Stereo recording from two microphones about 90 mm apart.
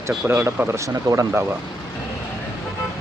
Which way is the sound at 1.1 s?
50° right (ahead or behind).